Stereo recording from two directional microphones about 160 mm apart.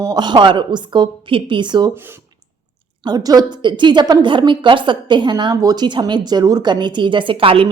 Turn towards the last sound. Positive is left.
turn(degrees=-35)  # may be behind; listen again after turning